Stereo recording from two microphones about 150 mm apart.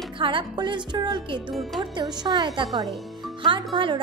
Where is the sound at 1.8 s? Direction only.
30° right (ahead or behind).